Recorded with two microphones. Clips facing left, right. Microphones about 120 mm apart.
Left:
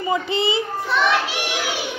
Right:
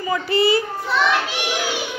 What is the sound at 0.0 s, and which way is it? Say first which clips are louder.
Speech: right 2 dB; 25° left (ahead or behind).